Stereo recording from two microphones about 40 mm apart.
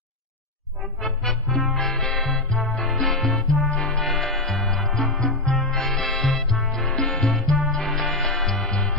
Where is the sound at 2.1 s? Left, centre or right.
Centre.